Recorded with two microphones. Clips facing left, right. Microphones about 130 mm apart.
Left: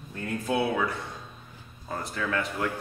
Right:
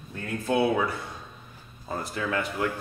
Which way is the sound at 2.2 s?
15° right (ahead or behind).